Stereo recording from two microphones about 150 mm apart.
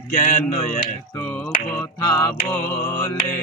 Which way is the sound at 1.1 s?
15° left (ahead or behind).